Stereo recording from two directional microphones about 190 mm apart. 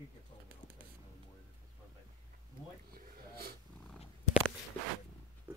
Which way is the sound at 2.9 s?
55° right (ahead or behind).